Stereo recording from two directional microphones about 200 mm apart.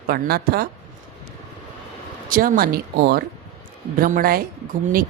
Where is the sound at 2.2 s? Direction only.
45° right (ahead or behind).